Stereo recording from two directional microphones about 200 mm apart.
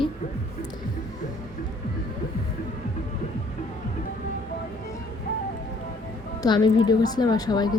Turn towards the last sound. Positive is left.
turn(degrees=20)  # may be behind; listen again after turning